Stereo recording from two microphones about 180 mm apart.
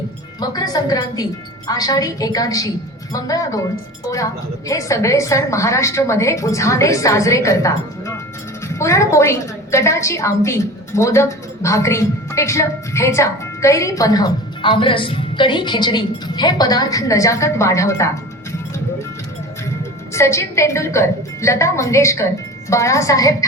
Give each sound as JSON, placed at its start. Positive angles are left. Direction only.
{"t": 0.3, "sound": "a woman's voice", "side_deg": 20}
{"t": 4.7, "sound": "a woman's voice", "side_deg": 15}
{"t": 20.1, "sound": "a woman's voice", "side_deg": 15}